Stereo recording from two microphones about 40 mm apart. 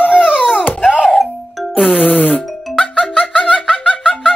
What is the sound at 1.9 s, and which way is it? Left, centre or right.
Music, left.